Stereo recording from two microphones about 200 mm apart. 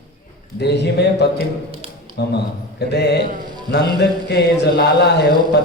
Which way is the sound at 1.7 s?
25° right (ahead or behind).